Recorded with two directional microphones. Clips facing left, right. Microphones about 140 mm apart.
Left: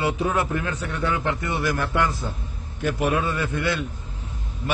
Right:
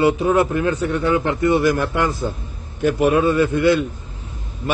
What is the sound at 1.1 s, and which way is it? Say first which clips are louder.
A man's voice: right 10 dB; 15° right (ahead or behind).